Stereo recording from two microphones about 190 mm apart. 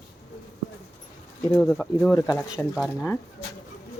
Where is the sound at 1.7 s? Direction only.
5° left (ahead or behind).